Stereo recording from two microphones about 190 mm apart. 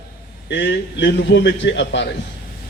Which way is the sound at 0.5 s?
70° left (ahead or behind).